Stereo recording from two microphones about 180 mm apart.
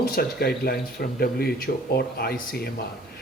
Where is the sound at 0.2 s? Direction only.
55° left (ahead or behind).